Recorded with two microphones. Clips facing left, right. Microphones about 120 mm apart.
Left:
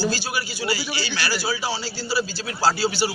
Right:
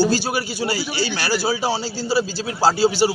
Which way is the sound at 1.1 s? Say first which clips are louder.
Right 3 dB; 45° right (ahead or behind).